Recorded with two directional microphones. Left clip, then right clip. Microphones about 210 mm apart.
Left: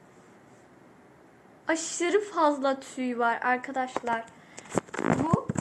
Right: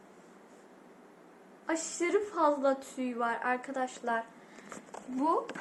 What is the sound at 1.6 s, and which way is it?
A woman's voice, 30° left (ahead or behind).